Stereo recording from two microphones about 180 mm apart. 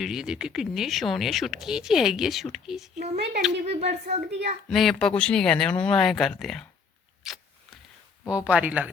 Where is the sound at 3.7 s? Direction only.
35° right (ahead or behind).